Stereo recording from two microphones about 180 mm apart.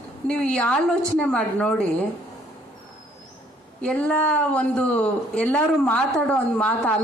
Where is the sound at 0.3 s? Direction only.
5° left (ahead or behind).